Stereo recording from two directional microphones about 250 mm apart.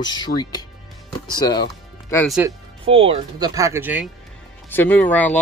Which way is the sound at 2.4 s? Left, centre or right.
Right.